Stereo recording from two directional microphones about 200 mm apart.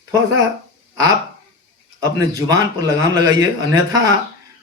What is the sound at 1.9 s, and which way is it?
A man's voice, 15° right (ahead or behind).